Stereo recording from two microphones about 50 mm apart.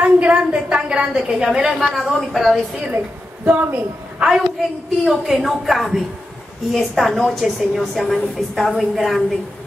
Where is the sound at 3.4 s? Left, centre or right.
Right.